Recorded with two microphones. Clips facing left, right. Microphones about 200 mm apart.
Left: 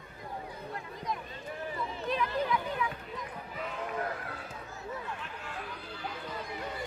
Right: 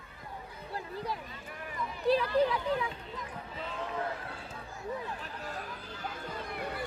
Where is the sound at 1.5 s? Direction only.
30° left (ahead or behind).